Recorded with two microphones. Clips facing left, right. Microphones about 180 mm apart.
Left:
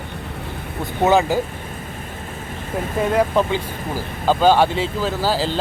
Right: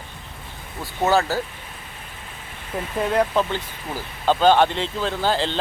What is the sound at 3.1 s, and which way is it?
Speech, 10° left (ahead or behind).